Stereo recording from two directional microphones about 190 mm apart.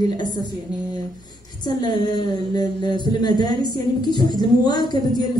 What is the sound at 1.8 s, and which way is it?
Speech, 20° left (ahead or behind).